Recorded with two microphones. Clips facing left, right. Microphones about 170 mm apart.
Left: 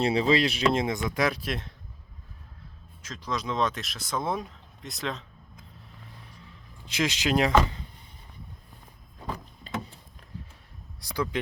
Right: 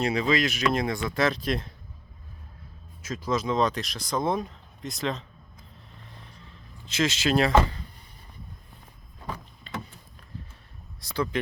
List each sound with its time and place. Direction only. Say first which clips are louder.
0.0 s speech: left 1 dB; 30° left (ahead or behind); by 1.7 s centre (ahead or behind)
3.0 s speech: right 5 dB; 5° right (ahead or behind)
6.8 s speech: right 2 dB; 15° left (ahead or behind)
10.3 s a sound: even; 15° left (ahead or behind)
11.0 s speech: right 1 dB; 15° left (ahead or behind)